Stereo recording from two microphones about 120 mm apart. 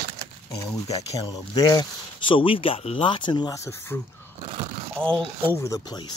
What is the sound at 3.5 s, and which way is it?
Speech, 20° left (ahead or behind).